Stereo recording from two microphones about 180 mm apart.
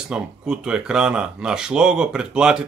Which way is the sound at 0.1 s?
5° right (ahead or behind).